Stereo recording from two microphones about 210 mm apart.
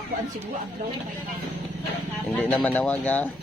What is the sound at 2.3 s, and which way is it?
Speech, 5° left (ahead or behind).